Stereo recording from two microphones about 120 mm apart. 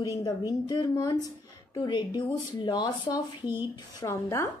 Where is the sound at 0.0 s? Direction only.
30° left (ahead or behind).